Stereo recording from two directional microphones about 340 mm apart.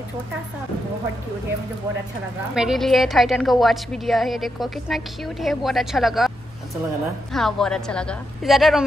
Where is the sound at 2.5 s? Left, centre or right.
Centre.